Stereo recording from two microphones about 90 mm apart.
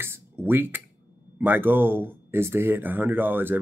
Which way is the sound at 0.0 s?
25° right (ahead or behind).